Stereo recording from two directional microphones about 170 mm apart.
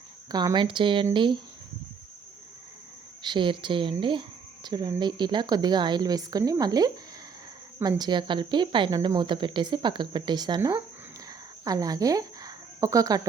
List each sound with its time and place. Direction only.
0.3 s speech: 25° right (ahead or behind)
3.2 s speech: 30° right (ahead or behind)
11.3 s a sound: 20° right (ahead or behind)